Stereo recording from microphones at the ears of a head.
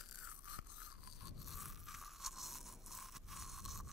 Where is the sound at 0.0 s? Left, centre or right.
Left.